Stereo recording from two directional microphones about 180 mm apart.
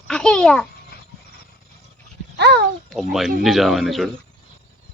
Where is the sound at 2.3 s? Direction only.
70° right (ahead or behind).